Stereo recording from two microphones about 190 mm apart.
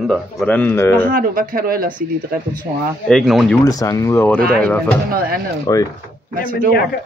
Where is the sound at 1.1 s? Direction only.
50° right (ahead or behind).